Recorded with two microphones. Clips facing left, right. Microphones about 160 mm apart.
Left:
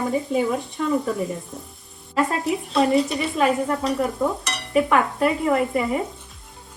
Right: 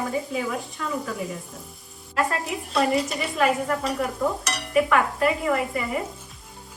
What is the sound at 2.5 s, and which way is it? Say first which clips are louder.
Stir: left 4 dB; centre (ahead or behind).